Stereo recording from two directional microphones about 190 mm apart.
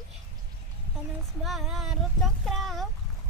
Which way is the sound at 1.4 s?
Centre (ahead or behind).